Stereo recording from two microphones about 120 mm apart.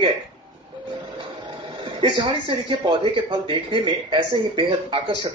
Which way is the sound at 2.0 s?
40° right (ahead or behind).